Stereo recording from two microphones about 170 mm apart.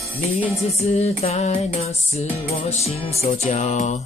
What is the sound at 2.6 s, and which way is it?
Music, 40° left (ahead or behind).